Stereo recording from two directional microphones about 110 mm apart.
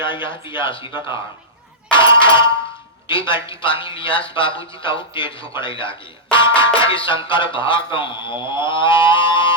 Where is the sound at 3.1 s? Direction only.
50° left (ahead or behind).